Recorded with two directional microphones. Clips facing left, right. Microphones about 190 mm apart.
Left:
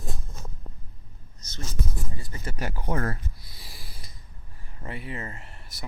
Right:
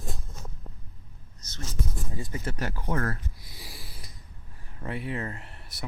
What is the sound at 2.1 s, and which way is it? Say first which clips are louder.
Speech: right 6 dB; 20° right (ahead or behind).